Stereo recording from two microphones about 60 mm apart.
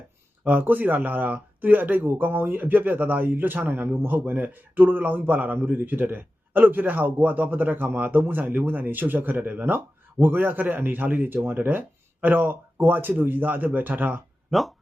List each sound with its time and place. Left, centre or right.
0.4 s speech: right
14.5 s speech: centre